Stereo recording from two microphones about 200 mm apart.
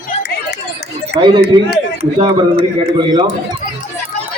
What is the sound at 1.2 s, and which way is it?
Speech, 25° right (ahead or behind).